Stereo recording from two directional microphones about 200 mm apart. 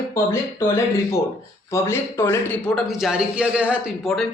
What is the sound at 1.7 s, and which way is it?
A man's voice, 10° left (ahead or behind).